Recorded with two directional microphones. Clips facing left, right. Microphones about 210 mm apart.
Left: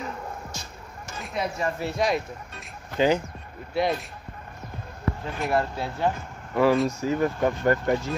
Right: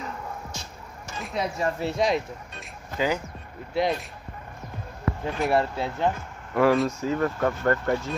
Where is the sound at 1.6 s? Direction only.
25° right (ahead or behind).